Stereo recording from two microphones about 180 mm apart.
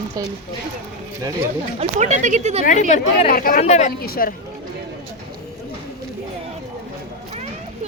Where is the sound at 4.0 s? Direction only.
55° left (ahead or behind).